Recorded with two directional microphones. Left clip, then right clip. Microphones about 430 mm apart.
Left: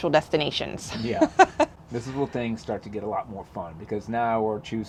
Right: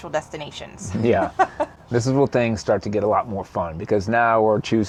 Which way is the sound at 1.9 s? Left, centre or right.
Right.